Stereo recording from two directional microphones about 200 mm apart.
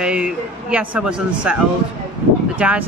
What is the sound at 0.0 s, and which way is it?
A woman's voice, 5° right (ahead or behind).